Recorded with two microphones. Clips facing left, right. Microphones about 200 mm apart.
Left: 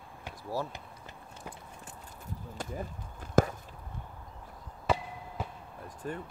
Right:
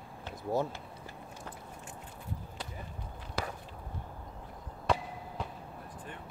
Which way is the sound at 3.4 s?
45° left (ahead or behind).